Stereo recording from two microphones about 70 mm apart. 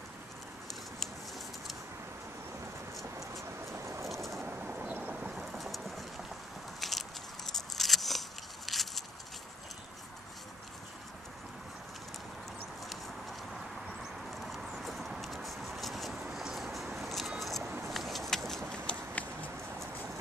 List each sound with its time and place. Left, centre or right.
3.7 s vehicle: right
4.1 s vehicle: centre
4.5 s vehicle: centre
5.1 s vehicle: centre
5.4 s vehicle: centre
6.8 s biting: centre
7.5 s a sound: centre
14.3 s horse: centre
17.4 s a sound: centre
18.9 s a sound: left